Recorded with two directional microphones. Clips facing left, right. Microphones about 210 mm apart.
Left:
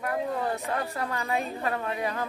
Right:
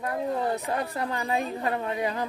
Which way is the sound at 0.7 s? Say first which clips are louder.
Right 1 dB; 25° right (ahead or behind).